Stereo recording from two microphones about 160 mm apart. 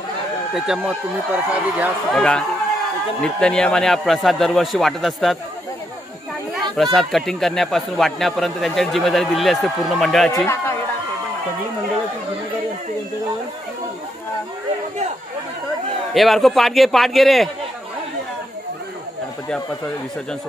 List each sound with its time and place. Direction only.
0.6 s speech: 5° right (ahead or behind)
2.1 s speech: 5° left (ahead or behind)
6.8 s speech: centre (ahead or behind)
10.3 s speech: 15° left (ahead or behind)
16.1 s speech: centre (ahead or behind)